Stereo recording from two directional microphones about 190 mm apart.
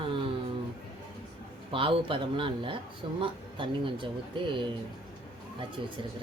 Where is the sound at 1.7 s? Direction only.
30° right (ahead or behind).